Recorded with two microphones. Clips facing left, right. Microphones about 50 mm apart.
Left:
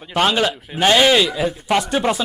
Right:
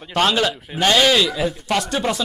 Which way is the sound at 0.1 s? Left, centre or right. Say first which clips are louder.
Left 1 dB; centre.